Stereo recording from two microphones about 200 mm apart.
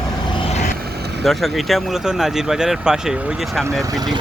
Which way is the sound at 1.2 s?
Centre (ahead or behind).